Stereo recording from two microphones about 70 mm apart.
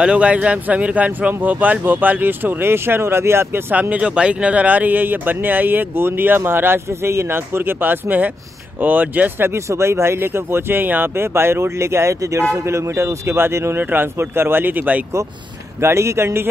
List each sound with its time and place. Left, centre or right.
0.0 s speech: centre; by 3.6 s right
3.9 s speech: centre
9.5 s speech: right
13.7 s speech: right
15.8 s speech: right